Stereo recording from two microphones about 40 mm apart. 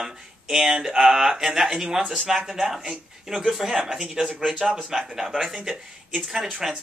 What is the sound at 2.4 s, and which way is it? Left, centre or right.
Speech, centre.